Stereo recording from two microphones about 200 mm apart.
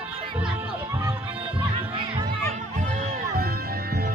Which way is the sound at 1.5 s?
25° right (ahead or behind).